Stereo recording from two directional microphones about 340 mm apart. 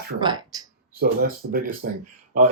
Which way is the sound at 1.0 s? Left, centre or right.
Right.